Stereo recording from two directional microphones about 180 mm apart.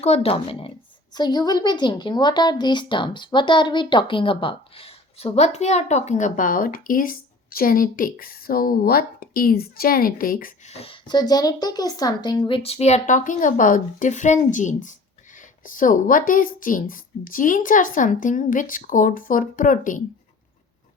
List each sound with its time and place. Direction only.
0.0 s a woman's voice: 35° left (ahead or behind); by 10.5 s 50° left (ahead or behind)
10.7 s a woman's voice: 35° left (ahead or behind); by 20.0 s 50° left (ahead or behind)